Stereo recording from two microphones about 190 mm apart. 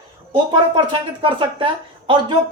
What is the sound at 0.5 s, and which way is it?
Speech, 25° right (ahead or behind).